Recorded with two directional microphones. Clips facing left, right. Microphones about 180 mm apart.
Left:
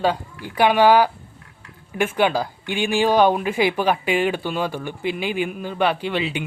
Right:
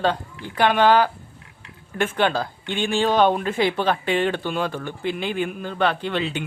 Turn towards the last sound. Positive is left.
turn(degrees=10)  # may be behind; listen again after turning